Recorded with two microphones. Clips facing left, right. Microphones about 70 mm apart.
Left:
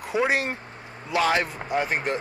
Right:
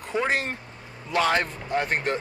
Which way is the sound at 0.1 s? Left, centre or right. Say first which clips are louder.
Left 2 dB; centre.